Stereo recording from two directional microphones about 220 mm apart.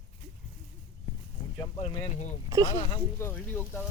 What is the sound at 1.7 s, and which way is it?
Speech, 30° left (ahead or behind).